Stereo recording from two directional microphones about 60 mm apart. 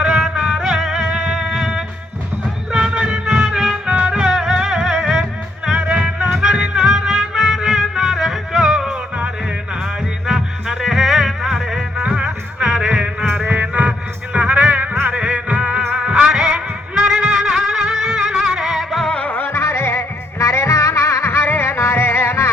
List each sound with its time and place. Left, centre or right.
0.0 s music: centre
10.2 s music: centre
13.2 s music: right; by 19.0 s centre
19.0 s music: centre
19.3 s music: left